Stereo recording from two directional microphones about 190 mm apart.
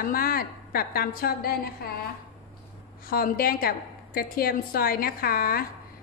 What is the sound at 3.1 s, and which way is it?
A woman's voice, 50° left (ahead or behind).